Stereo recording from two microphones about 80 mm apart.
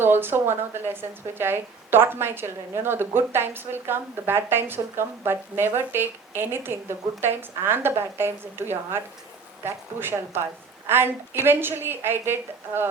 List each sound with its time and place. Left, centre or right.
0.0 s a woman's voice: right